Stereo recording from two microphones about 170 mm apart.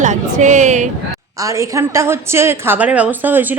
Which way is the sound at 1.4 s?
15° right (ahead or behind).